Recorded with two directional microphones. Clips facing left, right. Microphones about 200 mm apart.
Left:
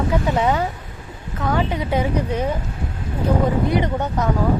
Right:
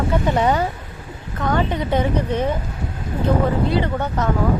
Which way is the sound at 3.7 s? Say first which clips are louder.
Even; 15° left (ahead or behind).